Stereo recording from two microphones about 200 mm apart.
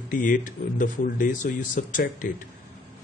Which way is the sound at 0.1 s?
40° left (ahead or behind).